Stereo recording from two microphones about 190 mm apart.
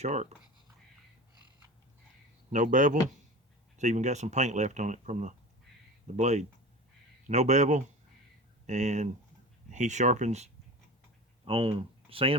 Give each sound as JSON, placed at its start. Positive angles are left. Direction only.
{"t": 0.0, "sound": "speech", "side_deg": -35}
{"t": 2.5, "sound": "speech", "side_deg": -40}